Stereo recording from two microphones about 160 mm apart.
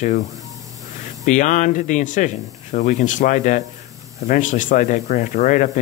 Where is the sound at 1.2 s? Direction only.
50° left (ahead or behind).